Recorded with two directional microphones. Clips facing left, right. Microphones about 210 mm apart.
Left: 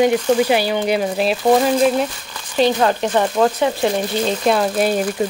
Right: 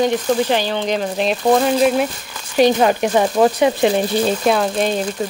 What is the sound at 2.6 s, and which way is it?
Speech, 15° right (ahead or behind).